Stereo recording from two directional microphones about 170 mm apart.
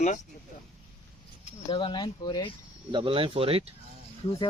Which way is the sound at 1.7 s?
30° left (ahead or behind).